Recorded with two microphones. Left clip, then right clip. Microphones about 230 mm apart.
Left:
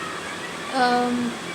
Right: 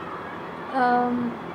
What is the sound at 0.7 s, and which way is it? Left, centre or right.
Speech, left.